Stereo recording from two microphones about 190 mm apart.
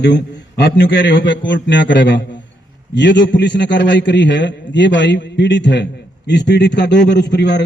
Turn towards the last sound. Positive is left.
turn(degrees=65)  # may be behind; listen again after turning